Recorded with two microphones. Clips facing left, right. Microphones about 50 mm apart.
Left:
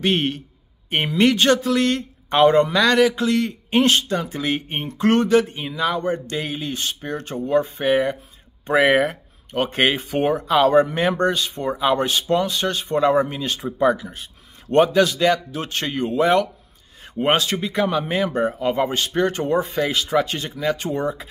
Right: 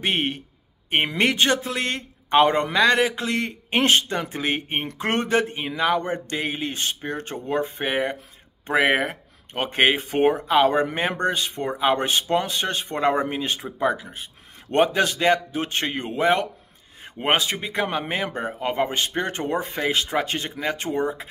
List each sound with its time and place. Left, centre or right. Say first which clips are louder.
0.0 s a man's voice: left 3 dB; right
10.4 s a man's voice: left 3 dB; right
11.4 s a man's voice: left 1 dB; right
13.6 s speech: left 8 dB; centre
13.9 s a man's voice: left 2 dB; right
18.3 s speech: left 7 dB; centre
18.6 s speech: left 3 dB; right